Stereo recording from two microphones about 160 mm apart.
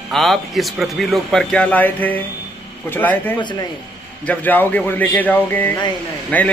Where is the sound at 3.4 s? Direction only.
30° left (ahead or behind).